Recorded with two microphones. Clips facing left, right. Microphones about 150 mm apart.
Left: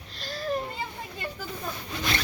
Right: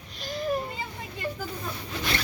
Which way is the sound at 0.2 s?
15° right (ahead or behind).